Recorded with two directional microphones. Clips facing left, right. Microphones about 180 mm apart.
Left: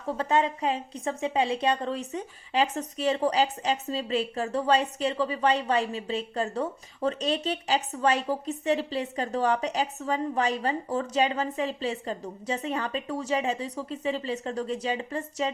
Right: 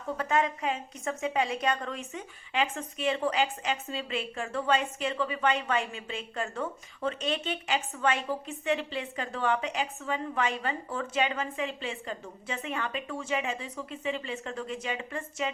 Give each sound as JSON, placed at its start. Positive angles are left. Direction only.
{"t": 0.2, "sound": "a woman's voice", "side_deg": 30}